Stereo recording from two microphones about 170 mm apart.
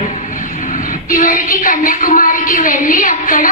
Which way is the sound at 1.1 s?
55° left (ahead or behind).